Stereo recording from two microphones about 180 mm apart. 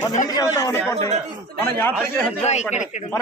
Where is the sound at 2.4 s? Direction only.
40° left (ahead or behind).